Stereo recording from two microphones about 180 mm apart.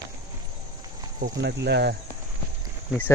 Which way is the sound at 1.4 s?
65° right (ahead or behind).